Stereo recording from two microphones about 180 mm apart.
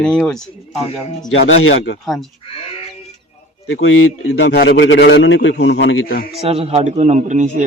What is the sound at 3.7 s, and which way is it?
Speech, 90° left.